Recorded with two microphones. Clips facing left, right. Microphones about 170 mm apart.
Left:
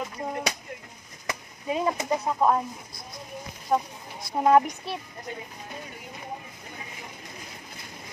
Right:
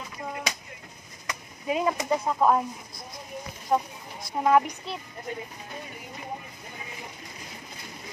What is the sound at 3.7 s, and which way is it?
Speech, centre (ahead or behind).